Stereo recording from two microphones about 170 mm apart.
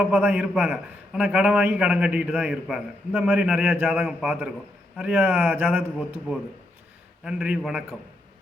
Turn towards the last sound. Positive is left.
turn(degrees=-5)  # may be behind; listen again after turning